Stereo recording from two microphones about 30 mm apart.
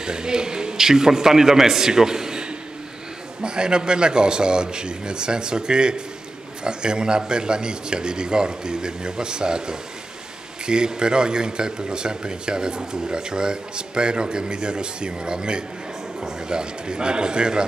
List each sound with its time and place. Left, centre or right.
0.0 s a man's voice: right